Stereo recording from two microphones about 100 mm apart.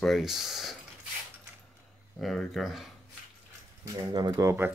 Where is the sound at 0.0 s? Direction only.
Centre (ahead or behind).